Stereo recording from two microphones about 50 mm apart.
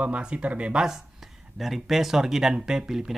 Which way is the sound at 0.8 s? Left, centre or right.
Centre.